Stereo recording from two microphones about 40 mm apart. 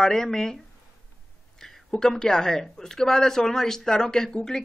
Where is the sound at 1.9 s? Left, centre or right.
Centre.